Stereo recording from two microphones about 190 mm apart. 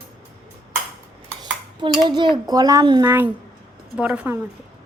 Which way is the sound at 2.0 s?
25° right (ahead or behind).